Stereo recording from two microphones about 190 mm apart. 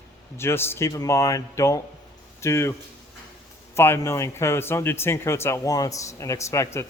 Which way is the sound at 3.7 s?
15° left (ahead or behind).